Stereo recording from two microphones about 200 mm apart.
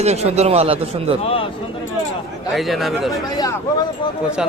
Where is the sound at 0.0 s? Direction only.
35° right (ahead or behind).